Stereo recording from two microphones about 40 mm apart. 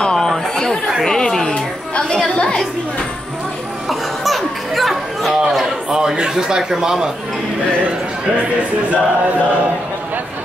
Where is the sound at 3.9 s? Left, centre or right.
Centre.